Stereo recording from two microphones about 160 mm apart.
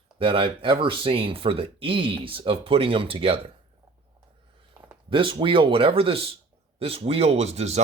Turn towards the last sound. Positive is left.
turn(degrees=-40)  # may be behind; listen again after turning